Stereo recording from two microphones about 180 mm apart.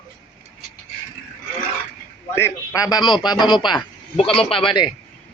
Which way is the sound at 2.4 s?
15° left (ahead or behind).